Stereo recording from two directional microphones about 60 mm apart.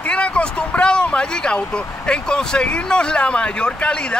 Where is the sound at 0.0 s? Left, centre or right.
Centre.